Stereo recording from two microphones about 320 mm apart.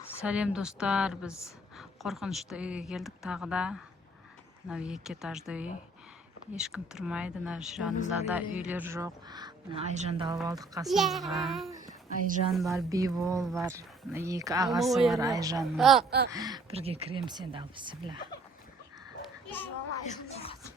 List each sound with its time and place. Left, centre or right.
0.2 s speech: centre
10.8 s speech: centre
15.3 s speech: centre
15.6 s speech: centre
16.0 s speech: right
16.3 s speech: centre
20.1 s a sound: centre